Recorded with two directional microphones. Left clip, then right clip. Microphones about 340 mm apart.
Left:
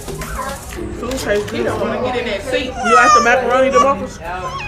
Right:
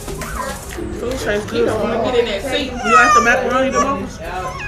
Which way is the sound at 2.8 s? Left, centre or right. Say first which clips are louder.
Left 1 dB; centre.